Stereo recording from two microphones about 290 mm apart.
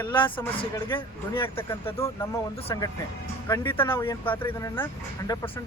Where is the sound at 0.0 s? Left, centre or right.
Centre.